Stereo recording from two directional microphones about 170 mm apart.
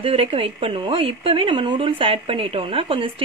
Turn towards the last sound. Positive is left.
turn(degrees=-30)  # may be behind; listen again after turning